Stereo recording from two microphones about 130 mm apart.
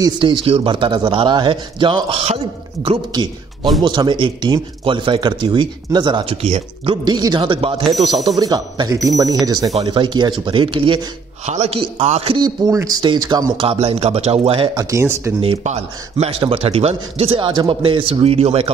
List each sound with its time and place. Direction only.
0.0 s speech: 40° right (ahead or behind)
3.1 s a man's voice: 35° right (ahead or behind)
7.1 s speech: 35° right (ahead or behind)
7.8 s speech: centre (ahead or behind)
8.4 s speech: 30° right (ahead or behind)
9.8 s speech: 40° right (ahead or behind)
11.4 s a man's voice: 60° right (ahead or behind)
12.4 s speech: 25° right (ahead or behind)
13.7 s a man's voice: 50° right (ahead or behind)
14.8 s speech: 25° right (ahead or behind)
15.6 s a man's voice: 60° right (ahead or behind)